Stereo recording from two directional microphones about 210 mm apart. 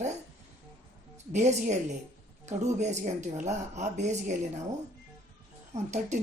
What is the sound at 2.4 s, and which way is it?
Speech, 35° right (ahead or behind).